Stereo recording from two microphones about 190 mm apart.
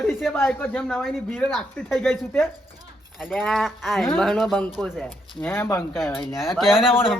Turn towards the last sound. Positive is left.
turn(degrees=0)  # may be behind; listen again after turning